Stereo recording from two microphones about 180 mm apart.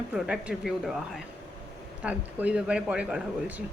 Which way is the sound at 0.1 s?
5° right (ahead or behind).